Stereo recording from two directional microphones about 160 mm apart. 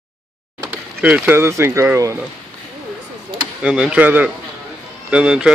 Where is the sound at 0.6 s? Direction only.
10° right (ahead or behind).